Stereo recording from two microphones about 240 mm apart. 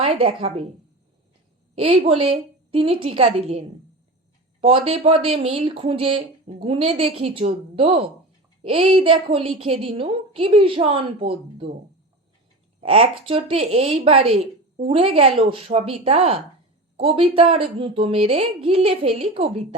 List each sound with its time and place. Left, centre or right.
0.0 s a woman's voice: right
1.7 s a woman's voice: right
12.8 s a woman's voice: right